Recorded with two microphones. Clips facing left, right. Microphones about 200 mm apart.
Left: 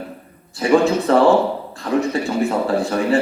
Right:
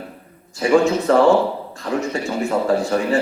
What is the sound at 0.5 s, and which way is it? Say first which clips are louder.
A man's voice: even; 35° left (ahead or behind).